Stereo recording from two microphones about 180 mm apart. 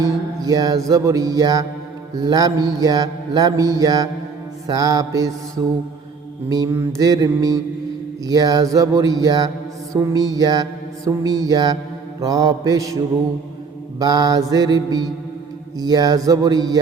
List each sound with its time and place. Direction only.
0.0 s mantra: 20° right (ahead or behind)
14.0 s mantra: 20° right (ahead or behind)